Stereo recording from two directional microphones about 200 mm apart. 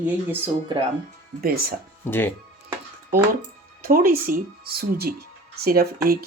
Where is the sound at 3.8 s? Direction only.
45° right (ahead or behind).